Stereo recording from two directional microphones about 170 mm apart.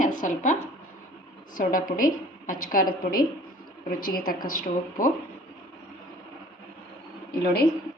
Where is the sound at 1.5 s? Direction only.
55° left (ahead or behind).